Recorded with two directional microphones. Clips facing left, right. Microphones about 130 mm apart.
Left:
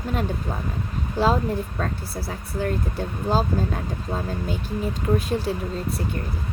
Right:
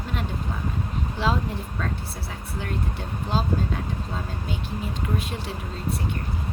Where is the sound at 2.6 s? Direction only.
40° left (ahead or behind).